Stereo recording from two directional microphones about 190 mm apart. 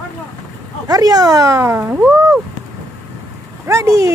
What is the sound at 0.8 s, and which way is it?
Speech, 20° right (ahead or behind).